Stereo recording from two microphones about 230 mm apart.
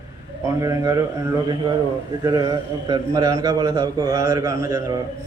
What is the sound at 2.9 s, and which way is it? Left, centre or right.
Mantra, centre.